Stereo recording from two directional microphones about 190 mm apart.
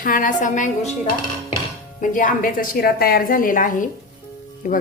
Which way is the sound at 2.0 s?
45° left (ahead or behind).